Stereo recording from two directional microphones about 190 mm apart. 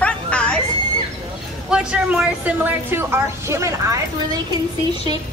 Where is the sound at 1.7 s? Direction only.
5° right (ahead or behind).